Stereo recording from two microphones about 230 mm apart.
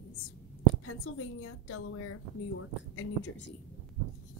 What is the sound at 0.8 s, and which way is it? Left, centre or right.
A woman's voice, left.